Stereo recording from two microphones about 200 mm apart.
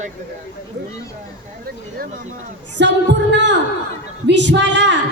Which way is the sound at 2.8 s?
60° right (ahead or behind).